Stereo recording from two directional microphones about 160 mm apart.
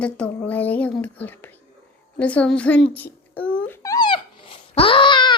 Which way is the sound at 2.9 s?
10° left (ahead or behind).